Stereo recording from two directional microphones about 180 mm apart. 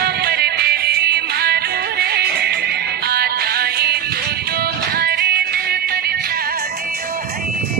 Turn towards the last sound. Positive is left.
turn(degrees=-60)  # may be behind; listen again after turning